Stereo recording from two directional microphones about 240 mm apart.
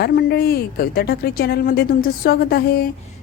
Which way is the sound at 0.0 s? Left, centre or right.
Left.